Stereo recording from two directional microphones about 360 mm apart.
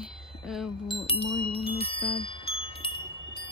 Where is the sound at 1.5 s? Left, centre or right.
Centre.